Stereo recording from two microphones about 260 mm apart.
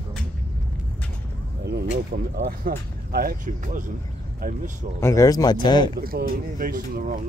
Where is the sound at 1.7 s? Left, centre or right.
Right.